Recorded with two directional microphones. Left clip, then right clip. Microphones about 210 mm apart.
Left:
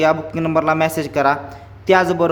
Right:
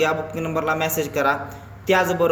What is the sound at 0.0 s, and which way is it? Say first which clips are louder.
Speech: left 5 dB; 25° left (ahead or behind).